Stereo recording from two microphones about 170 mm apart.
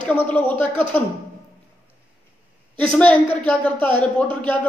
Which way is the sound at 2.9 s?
10° left (ahead or behind).